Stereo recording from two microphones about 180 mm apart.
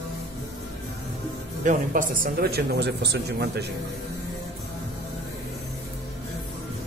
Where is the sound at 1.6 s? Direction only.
45° right (ahead or behind); by 3.6 s 65° right (ahead or behind).